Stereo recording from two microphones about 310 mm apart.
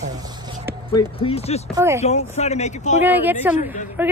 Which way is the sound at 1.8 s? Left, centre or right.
Centre.